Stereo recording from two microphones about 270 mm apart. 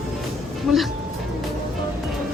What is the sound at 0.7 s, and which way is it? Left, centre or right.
Speech, centre.